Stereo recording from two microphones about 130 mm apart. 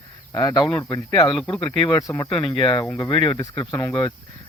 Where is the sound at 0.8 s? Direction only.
30° left (ahead or behind).